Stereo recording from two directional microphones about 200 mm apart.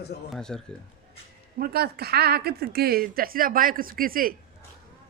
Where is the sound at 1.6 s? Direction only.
50° right (ahead or behind).